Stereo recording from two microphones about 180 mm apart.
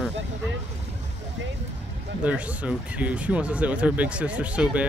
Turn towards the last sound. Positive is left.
turn(degrees=-5)  # may be behind; listen again after turning